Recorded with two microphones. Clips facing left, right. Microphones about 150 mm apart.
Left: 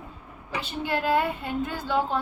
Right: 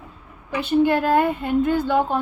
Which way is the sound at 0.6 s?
55° right (ahead or behind).